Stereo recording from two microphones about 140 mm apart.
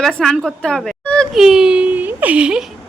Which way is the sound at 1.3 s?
5° right (ahead or behind).